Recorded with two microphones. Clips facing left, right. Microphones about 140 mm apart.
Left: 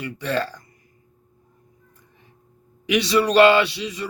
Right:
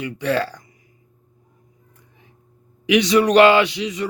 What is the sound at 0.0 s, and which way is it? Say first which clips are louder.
Speech: right 3 dB; 15° right (ahead or behind).